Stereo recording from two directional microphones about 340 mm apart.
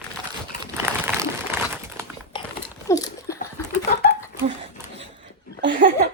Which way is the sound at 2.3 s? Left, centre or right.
Centre.